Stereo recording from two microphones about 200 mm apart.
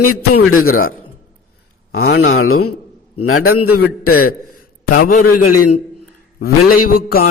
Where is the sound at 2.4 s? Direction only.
90° left.